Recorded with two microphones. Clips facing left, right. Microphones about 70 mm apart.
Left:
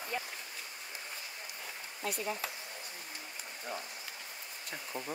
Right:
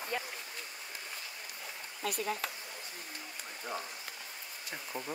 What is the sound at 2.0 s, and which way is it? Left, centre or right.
Speech, right.